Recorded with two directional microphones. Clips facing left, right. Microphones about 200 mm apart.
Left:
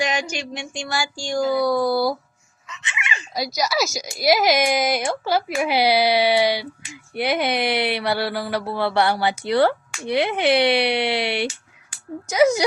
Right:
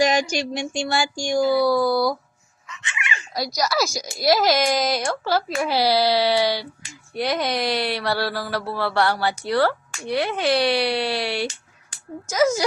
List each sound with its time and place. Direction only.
0.0 s a sound: 40° right (ahead or behind)
1.1 s speech: 15° right (ahead or behind)
2.8 s dog: 20° left (ahead or behind)
3.3 s speech: centre (ahead or behind)
3.8 s speech: 20° left (ahead or behind)